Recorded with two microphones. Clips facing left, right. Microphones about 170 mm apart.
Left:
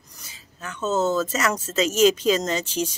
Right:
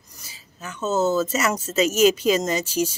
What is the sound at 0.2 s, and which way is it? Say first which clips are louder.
Speech: even; 5° right (ahead or behind).